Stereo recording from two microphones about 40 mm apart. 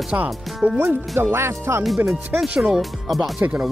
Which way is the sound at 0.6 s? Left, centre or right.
Right.